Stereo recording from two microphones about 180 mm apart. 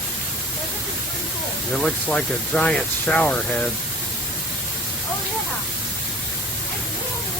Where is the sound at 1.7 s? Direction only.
5° left (ahead or behind).